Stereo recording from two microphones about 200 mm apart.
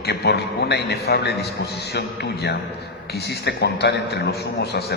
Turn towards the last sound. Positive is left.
turn(degrees=55)  # may be behind; listen again after turning